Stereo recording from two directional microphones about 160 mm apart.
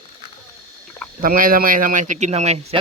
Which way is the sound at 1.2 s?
60° right (ahead or behind).